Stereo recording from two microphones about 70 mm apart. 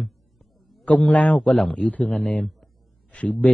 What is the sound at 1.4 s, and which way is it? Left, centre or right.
Speech, centre.